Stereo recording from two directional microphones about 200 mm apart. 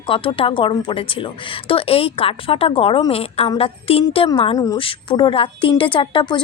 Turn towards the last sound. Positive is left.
turn(degrees=25)  # may be behind; listen again after turning